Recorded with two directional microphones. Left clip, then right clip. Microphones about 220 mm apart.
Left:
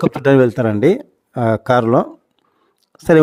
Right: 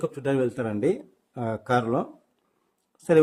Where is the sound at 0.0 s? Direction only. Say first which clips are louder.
Left 13 dB; 40° left (ahead or behind).